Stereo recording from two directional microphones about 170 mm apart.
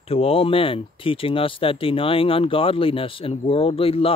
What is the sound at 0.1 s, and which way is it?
Speech, 35° left (ahead or behind).